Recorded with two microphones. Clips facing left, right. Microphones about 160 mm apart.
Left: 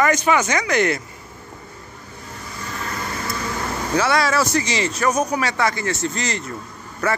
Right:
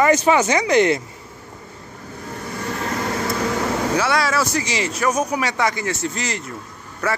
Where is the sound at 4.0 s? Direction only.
5° right (ahead or behind).